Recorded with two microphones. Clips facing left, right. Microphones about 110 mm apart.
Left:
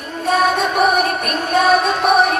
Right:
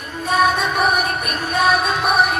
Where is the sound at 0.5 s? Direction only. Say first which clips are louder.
Left 3 dB; 50° left (ahead or behind).